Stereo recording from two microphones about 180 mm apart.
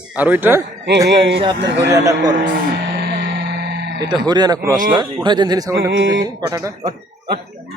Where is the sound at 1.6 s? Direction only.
75° right (ahead or behind).